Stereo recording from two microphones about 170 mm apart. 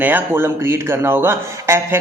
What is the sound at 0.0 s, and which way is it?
Speech, 10° right (ahead or behind).